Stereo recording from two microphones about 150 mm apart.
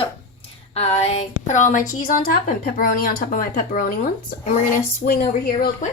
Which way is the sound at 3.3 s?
65° left (ahead or behind).